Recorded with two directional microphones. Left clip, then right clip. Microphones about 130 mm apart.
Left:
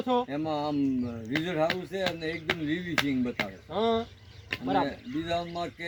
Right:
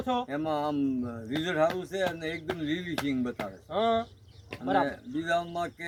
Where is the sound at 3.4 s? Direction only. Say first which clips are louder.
Right 3 dB; 15° right (ahead or behind).